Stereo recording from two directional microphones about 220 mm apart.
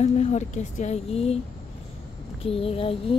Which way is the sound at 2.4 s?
25° left (ahead or behind).